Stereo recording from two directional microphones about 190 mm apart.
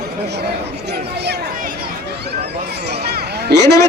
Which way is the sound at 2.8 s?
60° right (ahead or behind).